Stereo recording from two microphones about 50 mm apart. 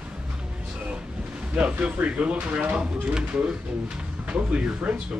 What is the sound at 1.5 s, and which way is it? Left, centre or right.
Speech, right.